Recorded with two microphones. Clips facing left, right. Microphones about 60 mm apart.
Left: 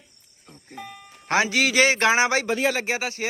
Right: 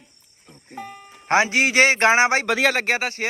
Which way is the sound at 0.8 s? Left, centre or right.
Right.